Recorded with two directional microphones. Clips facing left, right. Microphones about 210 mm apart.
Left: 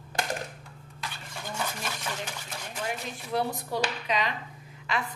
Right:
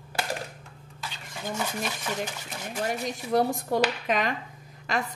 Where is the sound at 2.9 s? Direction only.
45° right (ahead or behind).